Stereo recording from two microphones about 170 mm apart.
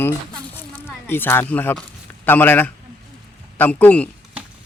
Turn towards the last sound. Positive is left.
turn(degrees=10)  # may be behind; listen again after turning